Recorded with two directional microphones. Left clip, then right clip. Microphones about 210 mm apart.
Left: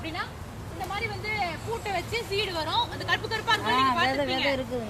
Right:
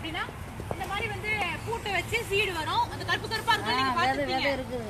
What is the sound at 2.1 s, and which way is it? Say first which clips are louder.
Speech: right 2 dB; 15° left (ahead or behind).